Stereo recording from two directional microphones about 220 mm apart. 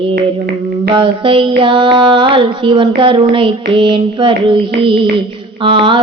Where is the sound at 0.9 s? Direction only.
20° right (ahead or behind).